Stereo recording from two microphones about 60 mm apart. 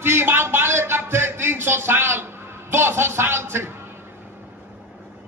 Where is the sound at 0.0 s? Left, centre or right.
Right.